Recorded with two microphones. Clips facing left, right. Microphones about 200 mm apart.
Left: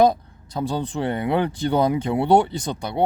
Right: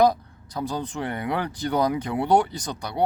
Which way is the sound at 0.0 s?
25° left (ahead or behind).